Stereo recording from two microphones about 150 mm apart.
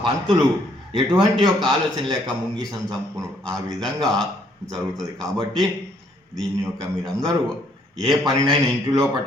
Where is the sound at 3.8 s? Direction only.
Centre (ahead or behind).